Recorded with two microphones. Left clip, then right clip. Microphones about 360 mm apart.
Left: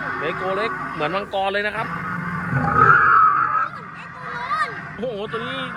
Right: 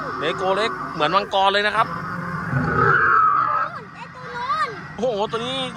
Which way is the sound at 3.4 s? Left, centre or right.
Centre.